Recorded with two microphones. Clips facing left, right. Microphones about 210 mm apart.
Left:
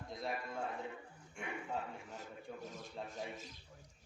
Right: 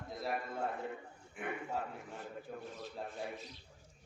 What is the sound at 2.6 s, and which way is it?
A man's voice, 45° left (ahead or behind).